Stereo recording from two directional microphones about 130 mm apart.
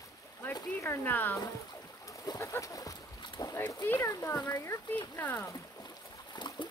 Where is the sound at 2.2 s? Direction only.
25° left (ahead or behind).